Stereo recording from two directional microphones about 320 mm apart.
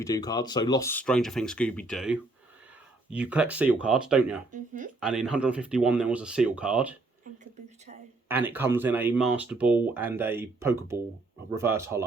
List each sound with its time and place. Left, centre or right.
0.0 s speech: centre
4.5 s speech: right
4.9 s speech: centre
7.3 s speech: right
8.3 s speech: centre